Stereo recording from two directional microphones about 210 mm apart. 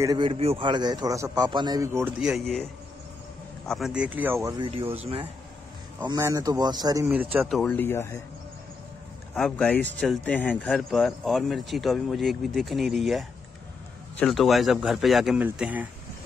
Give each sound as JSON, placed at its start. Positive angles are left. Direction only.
{"t": 0.0, "sound": "a man's voice", "side_deg": -20}
{"t": 3.6, "sound": "a man's voice", "side_deg": 0}
{"t": 5.9, "sound": "a man's voice", "side_deg": -15}
{"t": 7.1, "sound": "speech", "side_deg": -5}
{"t": 9.3, "sound": "speech", "side_deg": 5}